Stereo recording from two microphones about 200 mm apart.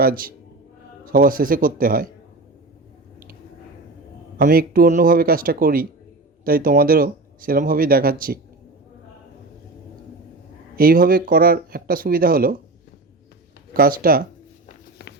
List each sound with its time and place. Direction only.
0.0 s speech: 45° right (ahead or behind)
4.4 s speech: 45° right (ahead or behind)
10.8 s speech: 45° right (ahead or behind)
13.7 s speech: 45° right (ahead or behind)
14.7 s a sound: 55° left (ahead or behind)